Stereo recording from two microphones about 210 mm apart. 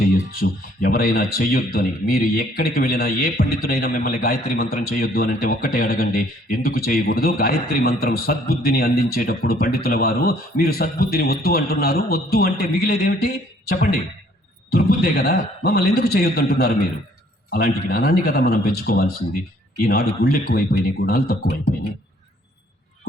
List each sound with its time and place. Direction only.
0.3 s speech: 45° left (ahead or behind)